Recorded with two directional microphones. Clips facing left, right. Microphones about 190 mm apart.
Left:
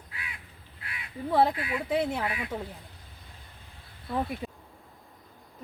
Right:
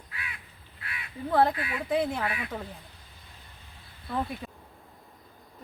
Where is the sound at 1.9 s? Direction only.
5° left (ahead or behind).